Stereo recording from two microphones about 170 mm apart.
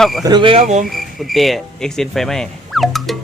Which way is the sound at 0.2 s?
25° right (ahead or behind).